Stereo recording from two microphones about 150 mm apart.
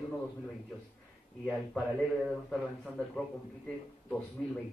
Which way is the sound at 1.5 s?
Centre (ahead or behind).